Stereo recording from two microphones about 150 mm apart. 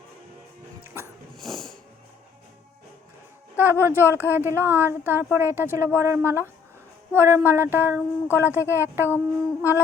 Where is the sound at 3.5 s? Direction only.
15° right (ahead or behind).